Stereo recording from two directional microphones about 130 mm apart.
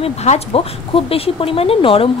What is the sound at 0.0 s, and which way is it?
Speech, 50° left (ahead or behind).